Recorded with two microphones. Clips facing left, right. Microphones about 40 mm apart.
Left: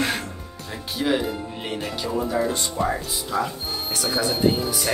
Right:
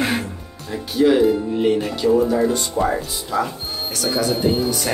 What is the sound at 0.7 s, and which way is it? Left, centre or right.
A man's voice, centre.